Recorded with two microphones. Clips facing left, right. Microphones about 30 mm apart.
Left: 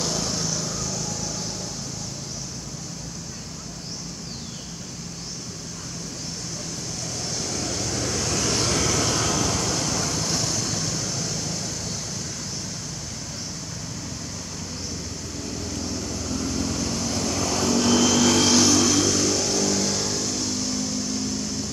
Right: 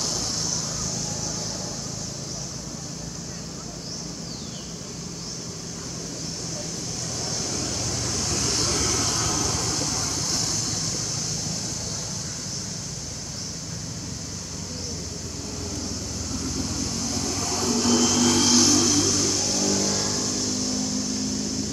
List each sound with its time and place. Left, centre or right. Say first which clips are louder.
0.0 s vehicle: left 2 dB; centre
7.2 s vehicle: left 1 dB; centre
8.5 s vehicle: left 3 dB; left; by 11.6 s centre
16.3 s vehicle: left 3 dB; centre